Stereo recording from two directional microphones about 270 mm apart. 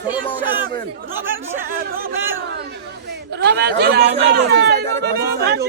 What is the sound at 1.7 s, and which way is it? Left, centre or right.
Speech, right.